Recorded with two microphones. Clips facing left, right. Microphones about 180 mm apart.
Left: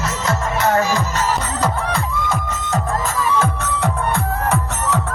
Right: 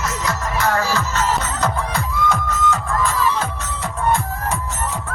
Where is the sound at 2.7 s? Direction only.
45° left (ahead or behind); by 4.9 s 65° left (ahead or behind).